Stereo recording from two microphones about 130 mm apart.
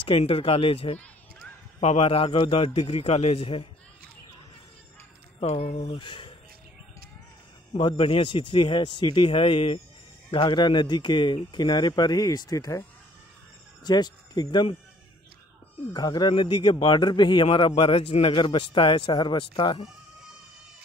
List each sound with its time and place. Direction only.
0.1 s a man's voice: 45° left (ahead or behind)
5.4 s a man's voice: 55° left (ahead or behind)
7.9 s a man's voice: 45° left (ahead or behind); by 12.8 s 25° left (ahead or behind)
13.8 s speech: 30° left (ahead or behind)
15.9 s a man's voice: 35° left (ahead or behind)